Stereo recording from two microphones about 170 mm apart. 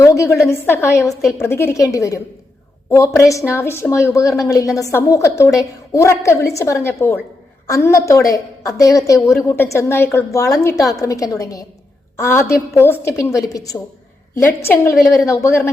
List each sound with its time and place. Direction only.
0.0 s a woman's voice: 20° left (ahead or behind)